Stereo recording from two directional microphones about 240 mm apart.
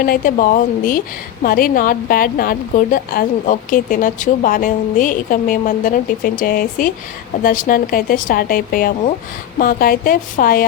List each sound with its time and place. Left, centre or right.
0.0 s a woman's voice: left